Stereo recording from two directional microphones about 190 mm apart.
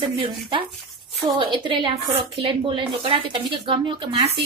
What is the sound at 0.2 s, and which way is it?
Speech, 25° right (ahead or behind).